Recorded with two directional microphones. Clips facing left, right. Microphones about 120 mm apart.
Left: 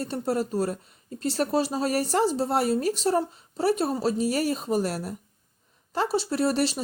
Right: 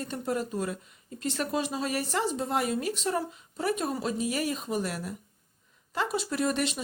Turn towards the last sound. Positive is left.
turn(degrees=35)  # may be behind; listen again after turning